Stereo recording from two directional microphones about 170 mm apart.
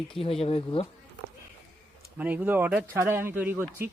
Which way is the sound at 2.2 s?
10° right (ahead or behind).